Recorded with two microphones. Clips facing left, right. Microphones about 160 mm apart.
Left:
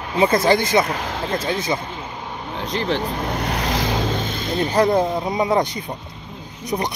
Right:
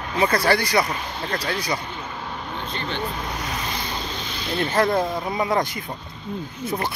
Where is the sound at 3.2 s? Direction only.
55° left (ahead or behind); by 4.0 s 85° left.